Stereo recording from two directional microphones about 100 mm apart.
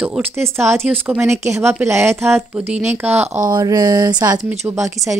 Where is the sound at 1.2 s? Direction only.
25° right (ahead or behind).